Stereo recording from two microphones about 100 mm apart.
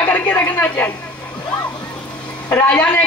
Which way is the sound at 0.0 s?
15° left (ahead or behind).